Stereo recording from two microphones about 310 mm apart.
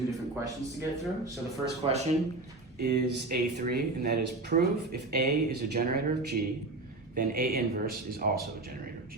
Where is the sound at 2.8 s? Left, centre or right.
Right.